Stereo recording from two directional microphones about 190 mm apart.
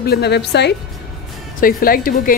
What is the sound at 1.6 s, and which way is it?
Speech, 50° left (ahead or behind).